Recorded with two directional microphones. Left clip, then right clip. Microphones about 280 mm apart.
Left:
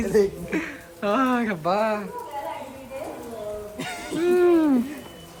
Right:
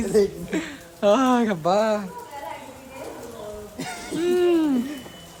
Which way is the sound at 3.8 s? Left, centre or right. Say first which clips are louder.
Even; centre.